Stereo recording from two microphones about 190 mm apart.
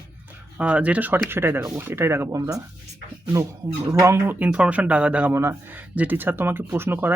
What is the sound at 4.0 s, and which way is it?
Speech, 10° right (ahead or behind).